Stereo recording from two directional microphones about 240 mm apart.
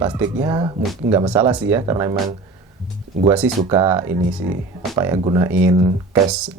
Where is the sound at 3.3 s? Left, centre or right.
Centre.